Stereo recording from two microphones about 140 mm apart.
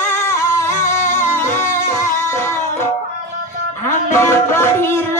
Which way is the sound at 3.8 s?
15° left (ahead or behind).